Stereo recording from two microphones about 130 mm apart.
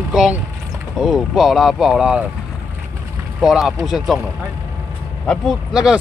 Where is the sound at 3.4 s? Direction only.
Centre (ahead or behind).